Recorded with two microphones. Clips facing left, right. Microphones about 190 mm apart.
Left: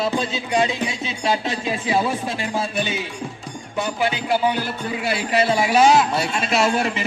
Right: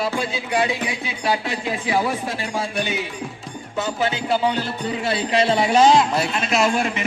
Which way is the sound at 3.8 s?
15° left (ahead or behind).